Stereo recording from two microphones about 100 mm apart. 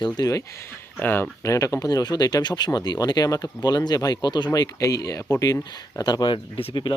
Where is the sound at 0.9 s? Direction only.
20° left (ahead or behind).